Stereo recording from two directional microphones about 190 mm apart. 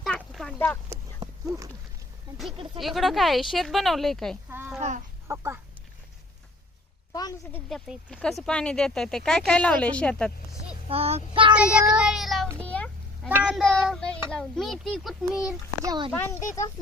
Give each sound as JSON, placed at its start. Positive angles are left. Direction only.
{"t": 0.0, "sound": "a sound", "side_deg": 0}
{"t": 2.8, "sound": "speech", "side_deg": 0}
{"t": 4.4, "sound": "a child's voice", "side_deg": -10}
{"t": 4.8, "sound": "chicken", "side_deg": -40}
{"t": 5.3, "sound": "a child's voice", "side_deg": -15}
{"t": 7.1, "sound": "a sound", "side_deg": 20}
{"t": 7.5, "sound": "speech", "side_deg": 5}
{"t": 10.8, "sound": "child singing", "side_deg": -30}
{"t": 11.5, "sound": "speech", "side_deg": -5}
{"t": 12.5, "sound": "a sound", "side_deg": 5}
{"t": 13.2, "sound": "speech", "side_deg": -5}
{"t": 15.8, "sound": "child singing", "side_deg": -20}
{"t": 16.1, "sound": "speech", "side_deg": 15}